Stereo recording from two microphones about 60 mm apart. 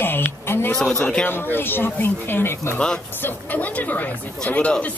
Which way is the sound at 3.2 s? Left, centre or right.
Left.